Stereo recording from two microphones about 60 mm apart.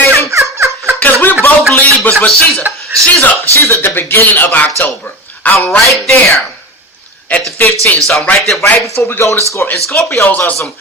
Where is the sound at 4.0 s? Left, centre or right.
Left.